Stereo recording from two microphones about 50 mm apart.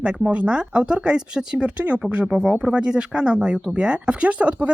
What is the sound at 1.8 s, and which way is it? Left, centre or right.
Speech, right.